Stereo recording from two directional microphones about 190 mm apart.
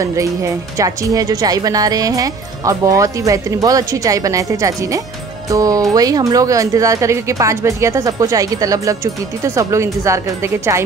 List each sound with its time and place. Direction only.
0.0 s speech: 15° right (ahead or behind)